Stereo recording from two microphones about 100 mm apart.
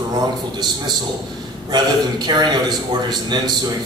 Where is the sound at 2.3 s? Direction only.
45° right (ahead or behind).